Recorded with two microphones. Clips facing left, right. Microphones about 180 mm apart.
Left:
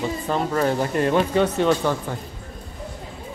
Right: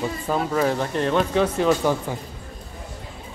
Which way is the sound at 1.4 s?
5° right (ahead or behind).